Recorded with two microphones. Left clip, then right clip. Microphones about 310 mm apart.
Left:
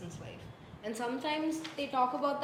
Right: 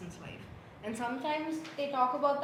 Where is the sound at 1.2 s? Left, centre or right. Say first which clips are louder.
Even; centre.